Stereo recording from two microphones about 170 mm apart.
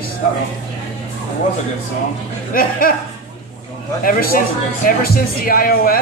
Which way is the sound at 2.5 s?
60° left (ahead or behind).